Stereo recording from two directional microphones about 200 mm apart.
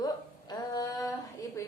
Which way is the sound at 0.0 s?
20° left (ahead or behind).